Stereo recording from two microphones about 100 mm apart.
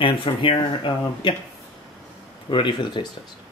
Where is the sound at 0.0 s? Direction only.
60° left (ahead or behind).